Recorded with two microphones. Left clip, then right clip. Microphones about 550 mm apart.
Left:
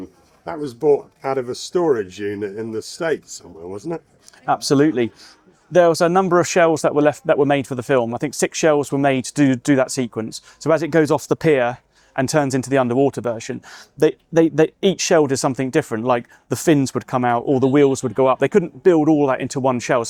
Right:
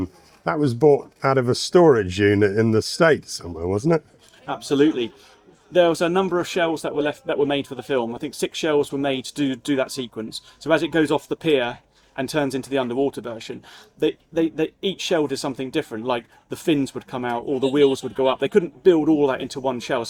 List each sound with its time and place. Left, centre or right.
0.4 s speech: right
4.4 s speech: left
14.0 s speech: left